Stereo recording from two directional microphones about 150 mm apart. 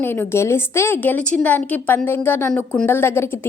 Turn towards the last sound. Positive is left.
turn(degrees=15)  # may be behind; listen again after turning